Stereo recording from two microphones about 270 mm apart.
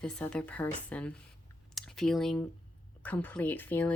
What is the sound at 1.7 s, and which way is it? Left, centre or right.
Clicking, centre.